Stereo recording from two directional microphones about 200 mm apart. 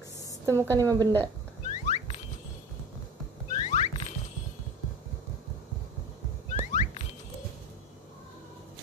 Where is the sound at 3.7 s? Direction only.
35° left (ahead or behind).